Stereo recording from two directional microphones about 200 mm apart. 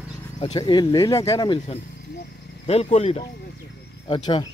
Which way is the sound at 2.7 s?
30° left (ahead or behind).